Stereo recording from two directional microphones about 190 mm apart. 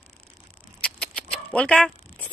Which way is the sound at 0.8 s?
5° left (ahead or behind).